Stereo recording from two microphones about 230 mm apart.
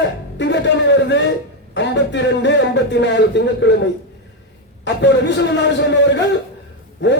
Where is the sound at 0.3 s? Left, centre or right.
Left.